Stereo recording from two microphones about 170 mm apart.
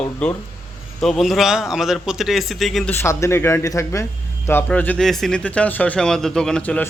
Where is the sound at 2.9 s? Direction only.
15° left (ahead or behind).